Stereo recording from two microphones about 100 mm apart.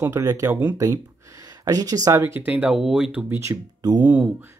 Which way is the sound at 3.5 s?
40° right (ahead or behind).